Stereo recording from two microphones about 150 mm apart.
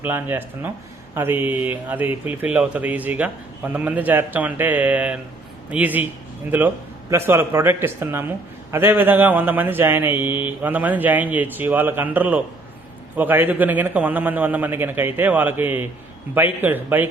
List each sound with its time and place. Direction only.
0.0 s speech: 15° right (ahead or behind)
7.1 s speech: 15° right (ahead or behind)